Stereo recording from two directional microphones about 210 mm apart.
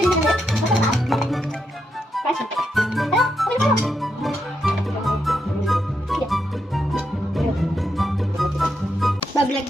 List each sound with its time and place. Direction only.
0.0 s music: centre (ahead or behind)